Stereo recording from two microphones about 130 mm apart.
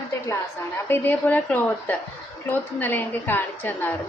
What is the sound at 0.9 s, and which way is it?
A woman's voice, 15° left (ahead or behind).